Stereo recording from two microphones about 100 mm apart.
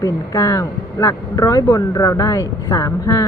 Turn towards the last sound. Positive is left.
turn(degrees=35)  # may be behind; listen again after turning